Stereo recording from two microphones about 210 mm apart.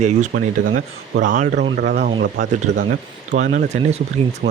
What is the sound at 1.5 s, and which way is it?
Speech, 50° right (ahead or behind).